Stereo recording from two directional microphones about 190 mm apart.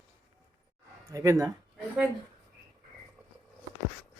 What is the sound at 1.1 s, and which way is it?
Speech, 15° right (ahead or behind).